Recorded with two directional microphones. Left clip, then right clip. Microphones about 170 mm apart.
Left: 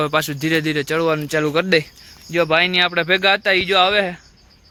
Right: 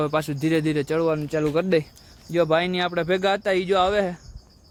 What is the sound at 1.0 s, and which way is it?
Speech, 10° left (ahead or behind).